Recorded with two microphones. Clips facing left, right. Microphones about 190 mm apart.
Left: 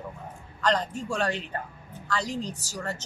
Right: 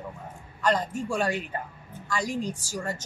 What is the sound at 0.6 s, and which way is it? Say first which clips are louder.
A woman's voice: right 1 dB; 10° right (ahead or behind).